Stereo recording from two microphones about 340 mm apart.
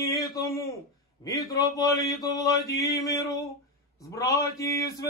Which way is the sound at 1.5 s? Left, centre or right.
Centre.